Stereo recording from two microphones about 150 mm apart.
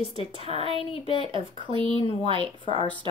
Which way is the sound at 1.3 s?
35° right (ahead or behind).